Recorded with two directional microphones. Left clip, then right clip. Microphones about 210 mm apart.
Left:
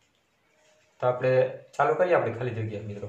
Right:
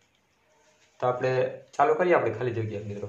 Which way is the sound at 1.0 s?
40° right (ahead or behind).